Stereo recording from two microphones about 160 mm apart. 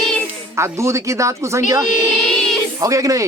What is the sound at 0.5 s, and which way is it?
Speech, 15° right (ahead or behind).